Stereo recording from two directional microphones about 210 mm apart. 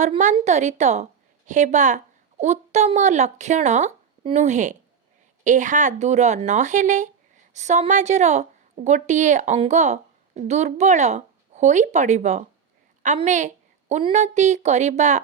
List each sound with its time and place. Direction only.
0.0 s a woman's voice: 35° right (ahead or behind)